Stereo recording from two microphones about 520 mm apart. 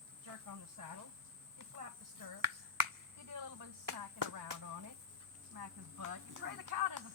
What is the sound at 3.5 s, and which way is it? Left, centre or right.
Speech, right.